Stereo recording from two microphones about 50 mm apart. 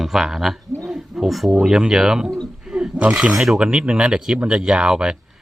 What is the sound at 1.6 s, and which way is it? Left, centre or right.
Speech, centre.